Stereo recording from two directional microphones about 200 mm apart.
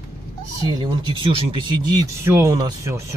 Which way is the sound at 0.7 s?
20° right (ahead or behind).